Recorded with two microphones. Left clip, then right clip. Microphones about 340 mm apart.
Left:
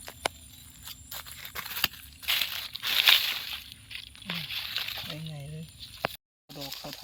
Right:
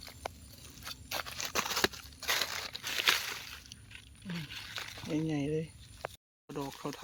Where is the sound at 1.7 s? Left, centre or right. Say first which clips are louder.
Left 1 dB; right.